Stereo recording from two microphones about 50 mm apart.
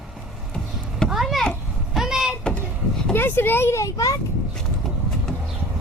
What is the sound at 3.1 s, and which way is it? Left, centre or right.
Speech, left.